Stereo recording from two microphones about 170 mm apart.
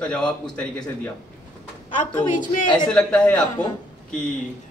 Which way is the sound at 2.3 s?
50° left (ahead or behind).